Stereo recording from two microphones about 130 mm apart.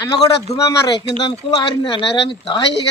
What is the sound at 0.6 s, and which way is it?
Speech, 25° left (ahead or behind).